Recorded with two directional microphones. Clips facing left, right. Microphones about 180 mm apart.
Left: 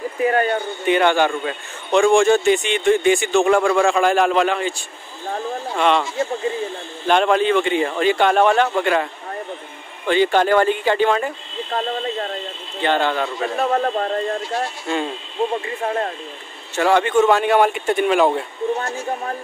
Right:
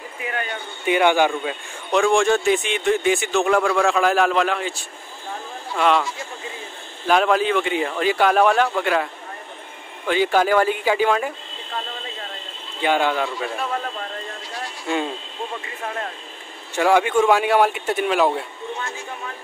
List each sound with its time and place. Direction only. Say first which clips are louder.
0.2 s speech: left 11 dB; 40° left (ahead or behind)
0.8 s speech: even; 10° right (ahead or behind)
7.1 s speech: left 2 dB; 5° right (ahead or behind)
11.7 s a sound: left 9 dB; 50° left (ahead or behind)
12.8 s speech: left 1 dB; 10° right (ahead or behind)
13.6 s speech: left 8 dB; 45° left (ahead or behind)
15.8 s speech: left 6 dB; 40° left (ahead or behind)
16.7 s speech: left 1 dB; 10° right (ahead or behind)
18.8 s speech: left 7 dB; 40° left (ahead or behind)